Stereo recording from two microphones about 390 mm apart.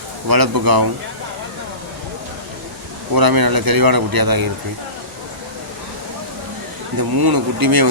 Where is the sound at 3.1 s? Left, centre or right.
Right.